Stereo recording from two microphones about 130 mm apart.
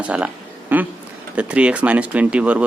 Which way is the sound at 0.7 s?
15° right (ahead or behind).